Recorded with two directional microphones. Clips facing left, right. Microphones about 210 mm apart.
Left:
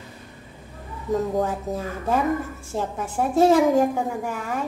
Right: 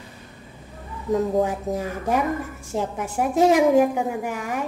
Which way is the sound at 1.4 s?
15° right (ahead or behind).